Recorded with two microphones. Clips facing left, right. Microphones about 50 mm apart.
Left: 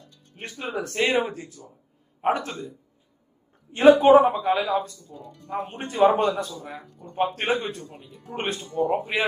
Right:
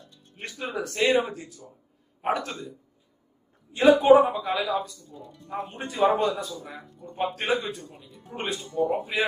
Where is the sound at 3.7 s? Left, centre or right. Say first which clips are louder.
Left 2 dB; left.